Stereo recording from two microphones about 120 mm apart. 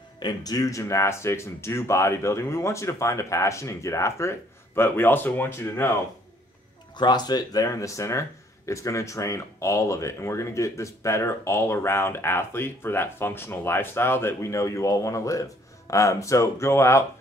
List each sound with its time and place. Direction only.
0.2 s speech: 35° left (ahead or behind)
7.0 s speech: 35° left (ahead or behind)